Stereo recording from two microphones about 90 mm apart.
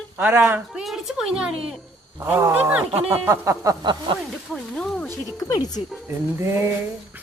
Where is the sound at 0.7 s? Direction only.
5° right (ahead or behind).